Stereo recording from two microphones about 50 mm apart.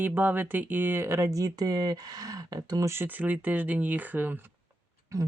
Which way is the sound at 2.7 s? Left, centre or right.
Right.